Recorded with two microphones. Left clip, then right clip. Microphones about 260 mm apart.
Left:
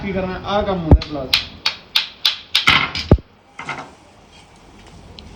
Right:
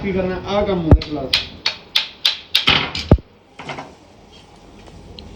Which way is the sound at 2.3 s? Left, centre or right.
Centre.